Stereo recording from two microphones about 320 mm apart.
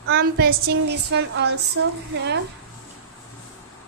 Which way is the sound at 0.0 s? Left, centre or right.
Right.